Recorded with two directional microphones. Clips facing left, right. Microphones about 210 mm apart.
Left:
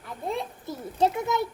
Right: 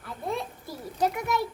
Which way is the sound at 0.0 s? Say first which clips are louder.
Left 1 dB; 20° left (ahead or behind).